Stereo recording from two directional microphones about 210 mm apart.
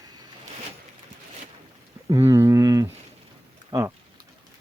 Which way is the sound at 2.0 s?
15° right (ahead or behind).